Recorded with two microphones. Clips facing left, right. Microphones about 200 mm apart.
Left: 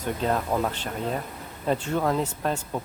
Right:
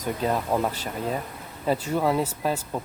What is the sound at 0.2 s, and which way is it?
Speech, 10° right (ahead or behind).